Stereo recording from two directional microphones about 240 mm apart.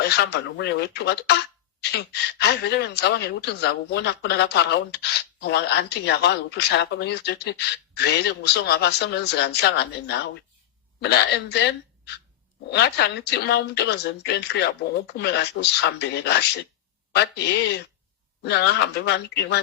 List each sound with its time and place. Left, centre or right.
0.0 s speech: left
2.4 s speech: left